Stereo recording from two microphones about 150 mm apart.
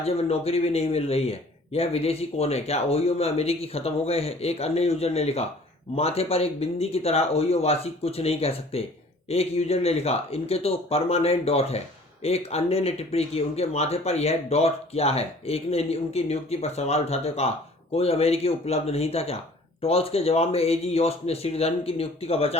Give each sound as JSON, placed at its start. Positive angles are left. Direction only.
{"t": 0.0, "sound": "a man's voice", "side_deg": 40}